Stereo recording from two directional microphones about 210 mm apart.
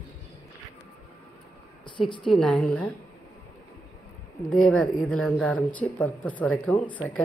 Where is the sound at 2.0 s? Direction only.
20° left (ahead or behind).